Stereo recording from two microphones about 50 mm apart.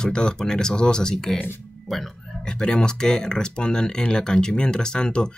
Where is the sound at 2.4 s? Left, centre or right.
Centre.